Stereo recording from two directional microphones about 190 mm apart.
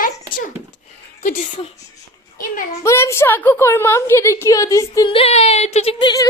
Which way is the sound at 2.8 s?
15° left (ahead or behind).